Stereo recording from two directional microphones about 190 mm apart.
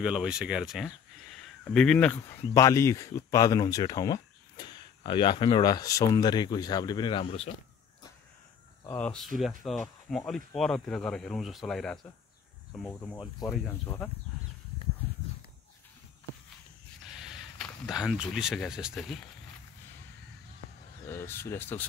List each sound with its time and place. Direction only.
0.0 s speech: 5° right (ahead or behind); by 7.5 s 30° left (ahead or behind)
8.9 s speech: 5° left (ahead or behind)
17.2 s a sound: 5° right (ahead or behind)
18.2 s speech: centre (ahead or behind)
21.1 s speech: 15° left (ahead or behind)